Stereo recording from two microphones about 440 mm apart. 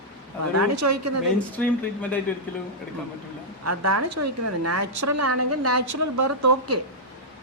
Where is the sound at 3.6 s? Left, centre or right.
Right.